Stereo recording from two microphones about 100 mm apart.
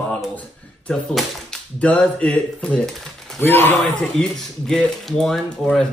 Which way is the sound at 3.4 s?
20° left (ahead or behind).